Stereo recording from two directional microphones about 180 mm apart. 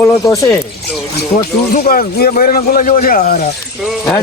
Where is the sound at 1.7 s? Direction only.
55° left (ahead or behind).